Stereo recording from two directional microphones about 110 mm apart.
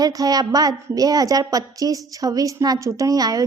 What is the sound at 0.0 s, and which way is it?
A woman's voice, 35° right (ahead or behind).